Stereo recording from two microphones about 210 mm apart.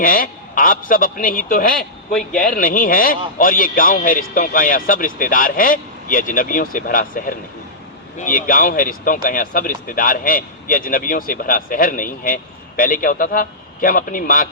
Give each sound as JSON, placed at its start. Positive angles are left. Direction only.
{"t": 0.0, "sound": "speech", "side_deg": 40}